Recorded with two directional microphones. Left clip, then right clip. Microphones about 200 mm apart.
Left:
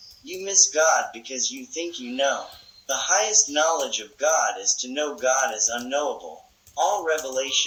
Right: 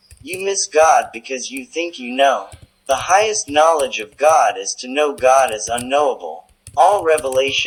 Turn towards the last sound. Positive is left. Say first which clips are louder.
# right 9 dB
turn(degrees=-15)  # may be behind; listen again after turning